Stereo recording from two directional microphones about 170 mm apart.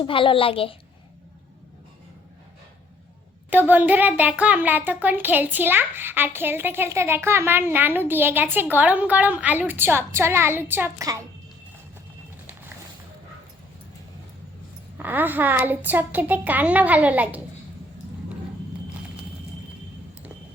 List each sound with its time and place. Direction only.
0.0 s a woman's voice: 30° left (ahead or behind)
3.5 s a child's voice: 10° right (ahead or behind)
14.9 s a child's voice: 10° right (ahead or behind)